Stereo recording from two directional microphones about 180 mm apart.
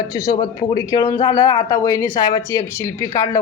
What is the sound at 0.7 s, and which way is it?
Speech, 20° left (ahead or behind).